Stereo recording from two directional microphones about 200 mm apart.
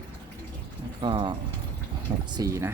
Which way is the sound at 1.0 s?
25° right (ahead or behind).